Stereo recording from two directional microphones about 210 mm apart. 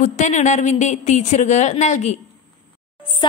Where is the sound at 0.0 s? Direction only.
35° left (ahead or behind).